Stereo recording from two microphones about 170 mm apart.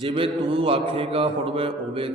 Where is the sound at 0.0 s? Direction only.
35° right (ahead or behind).